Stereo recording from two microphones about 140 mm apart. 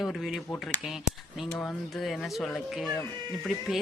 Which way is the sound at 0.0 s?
Centre (ahead or behind).